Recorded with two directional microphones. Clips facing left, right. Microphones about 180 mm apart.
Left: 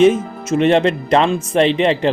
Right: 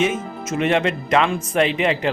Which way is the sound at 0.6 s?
35° left (ahead or behind).